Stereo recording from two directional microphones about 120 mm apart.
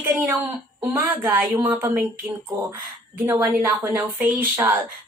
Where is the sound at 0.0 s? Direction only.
15° right (ahead or behind).